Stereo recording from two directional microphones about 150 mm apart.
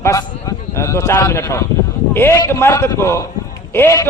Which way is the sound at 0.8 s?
20° left (ahead or behind).